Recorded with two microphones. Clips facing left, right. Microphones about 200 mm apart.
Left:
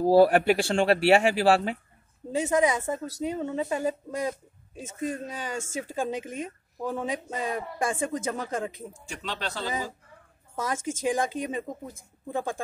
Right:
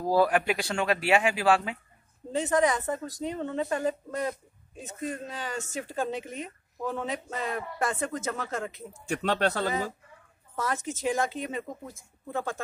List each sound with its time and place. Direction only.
0.0 s speech: 30° left (ahead or behind)
2.3 s a woman's voice: 10° left (ahead or behind)
9.0 s speech: 60° right (ahead or behind)
10.5 s a woman's voice: 10° left (ahead or behind)